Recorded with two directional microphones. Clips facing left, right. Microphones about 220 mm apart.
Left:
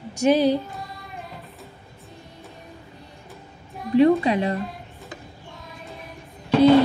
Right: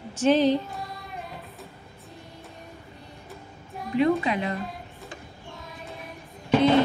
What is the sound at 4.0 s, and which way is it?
Speech, 35° left (ahead or behind).